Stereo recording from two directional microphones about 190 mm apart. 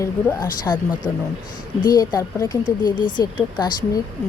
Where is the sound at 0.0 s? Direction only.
20° left (ahead or behind).